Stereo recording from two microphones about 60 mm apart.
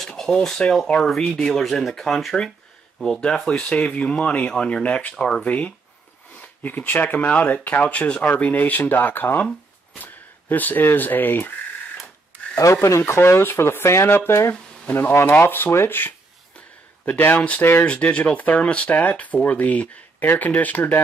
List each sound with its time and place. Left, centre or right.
0.2 s speech: centre
8.5 s speech: left
12.3 s a sound: right
12.7 s speech: left
14.5 s speech: left
15.4 s speech: left